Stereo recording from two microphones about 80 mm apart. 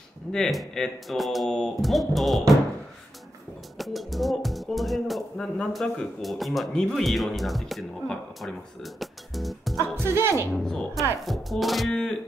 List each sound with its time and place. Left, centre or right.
0.3 s speech: centre
3.7 s speech: centre
9.8 s speech: right
10.5 s speech: centre